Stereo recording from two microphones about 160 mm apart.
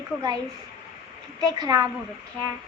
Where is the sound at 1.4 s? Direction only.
25° right (ahead or behind).